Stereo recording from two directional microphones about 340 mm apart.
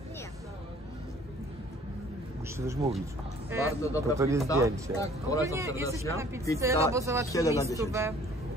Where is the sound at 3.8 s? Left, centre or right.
Centre.